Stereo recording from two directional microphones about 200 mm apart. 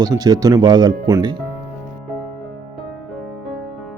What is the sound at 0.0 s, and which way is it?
Speech, 20° right (ahead or behind).